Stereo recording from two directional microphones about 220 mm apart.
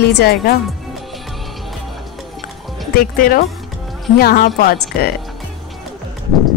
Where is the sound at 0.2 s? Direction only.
45° left (ahead or behind).